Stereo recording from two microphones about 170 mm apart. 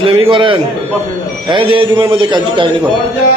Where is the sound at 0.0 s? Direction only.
30° right (ahead or behind).